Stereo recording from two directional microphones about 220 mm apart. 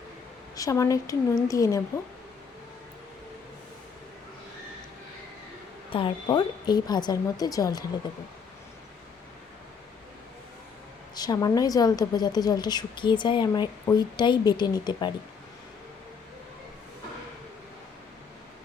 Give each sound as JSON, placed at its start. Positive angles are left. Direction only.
{"t": 0.5, "sound": "speech", "side_deg": 15}
{"t": 5.9, "sound": "speech", "side_deg": 20}
{"t": 11.1, "sound": "a woman's voice", "side_deg": 20}